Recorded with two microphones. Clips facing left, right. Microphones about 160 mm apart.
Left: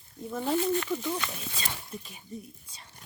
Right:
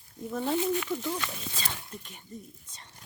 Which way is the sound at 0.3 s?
Centre (ahead or behind).